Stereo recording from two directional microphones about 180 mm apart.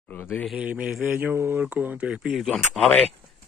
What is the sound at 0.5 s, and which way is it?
Speech, 5° right (ahead or behind).